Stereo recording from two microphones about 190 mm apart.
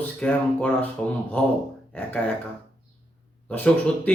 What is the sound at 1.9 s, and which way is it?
Speech, 10° left (ahead or behind).